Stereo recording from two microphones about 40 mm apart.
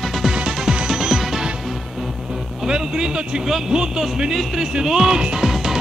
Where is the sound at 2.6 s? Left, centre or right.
Centre.